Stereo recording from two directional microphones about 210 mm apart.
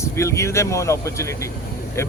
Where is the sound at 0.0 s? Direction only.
15° left (ahead or behind).